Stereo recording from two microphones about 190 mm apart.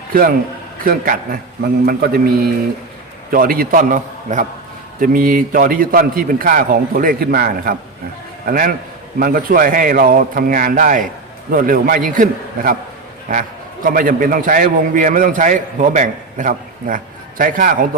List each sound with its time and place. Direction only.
0.1 s a man's voice: 50° right (ahead or behind)
13.8 s a man's voice: 45° right (ahead or behind)